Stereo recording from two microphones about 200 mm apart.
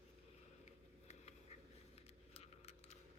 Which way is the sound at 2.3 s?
30° left (ahead or behind).